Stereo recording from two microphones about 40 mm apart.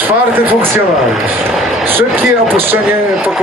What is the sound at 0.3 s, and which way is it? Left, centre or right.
Speech, right.